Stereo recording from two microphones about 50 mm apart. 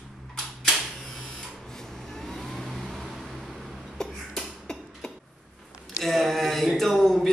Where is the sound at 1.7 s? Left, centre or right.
Centre.